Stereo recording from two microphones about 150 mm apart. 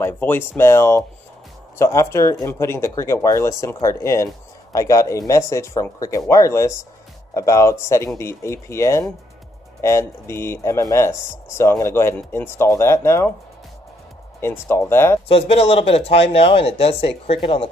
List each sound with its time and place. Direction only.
0.0 s speech: 15° left (ahead or behind)
14.4 s speech: 15° left (ahead or behind)
15.2 s speech: 40° left (ahead or behind)